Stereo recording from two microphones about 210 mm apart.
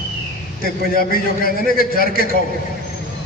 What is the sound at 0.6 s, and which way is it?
A man's voice, 45° left (ahead or behind).